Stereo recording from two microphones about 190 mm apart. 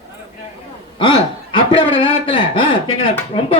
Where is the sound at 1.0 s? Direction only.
25° left (ahead or behind).